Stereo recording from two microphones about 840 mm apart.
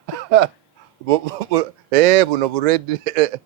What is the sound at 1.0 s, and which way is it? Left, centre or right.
Speech, right.